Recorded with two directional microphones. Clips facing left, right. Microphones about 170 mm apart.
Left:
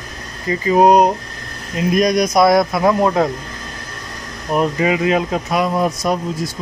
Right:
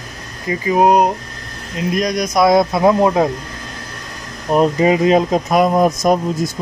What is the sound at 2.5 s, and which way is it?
Speech, 25° right (ahead or behind).